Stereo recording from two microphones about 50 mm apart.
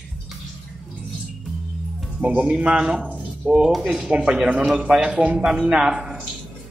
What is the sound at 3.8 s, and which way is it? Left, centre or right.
Speech, centre.